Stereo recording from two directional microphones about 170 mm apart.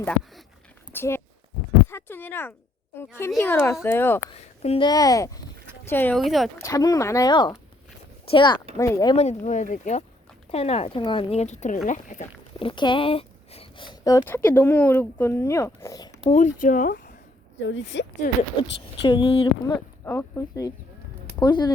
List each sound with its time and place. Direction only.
0.9 s speech: 15° left (ahead or behind)
4.6 s speech: 35° left (ahead or behind)
4.9 s speech: 20° left (ahead or behind)
6.1 s speech: centre (ahead or behind)
6.6 s speech: 20° left (ahead or behind)
8.8 s speech: 20° left (ahead or behind)
9.1 s speech: 45° left (ahead or behind)
12.5 s a sound: 30° left (ahead or behind)
14.3 s speech: 10° left (ahead or behind)
16.3 s speech: 45° left (ahead or behind)
17.6 s speech: 90° left
18.5 s speech: 25° left (ahead or behind)
20.1 s speech: 10° left (ahead or behind)